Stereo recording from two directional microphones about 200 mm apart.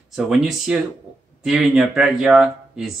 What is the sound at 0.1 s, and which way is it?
Speech, 5° right (ahead or behind).